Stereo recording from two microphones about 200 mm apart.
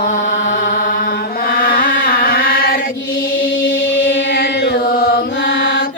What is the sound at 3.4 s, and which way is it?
Chant, 75° left (ahead or behind).